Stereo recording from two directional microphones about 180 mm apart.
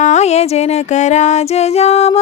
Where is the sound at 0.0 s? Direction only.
40° left (ahead or behind).